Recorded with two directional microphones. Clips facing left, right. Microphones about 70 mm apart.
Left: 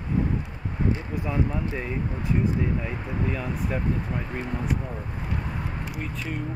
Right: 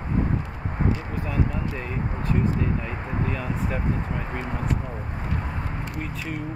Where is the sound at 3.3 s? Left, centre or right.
Centre.